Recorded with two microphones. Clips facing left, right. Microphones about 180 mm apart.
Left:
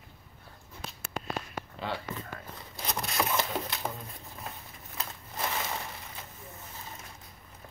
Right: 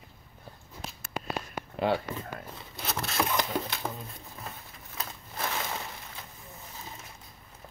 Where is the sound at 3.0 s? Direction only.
Centre (ahead or behind).